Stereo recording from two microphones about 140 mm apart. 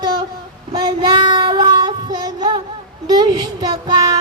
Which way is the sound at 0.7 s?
30° right (ahead or behind).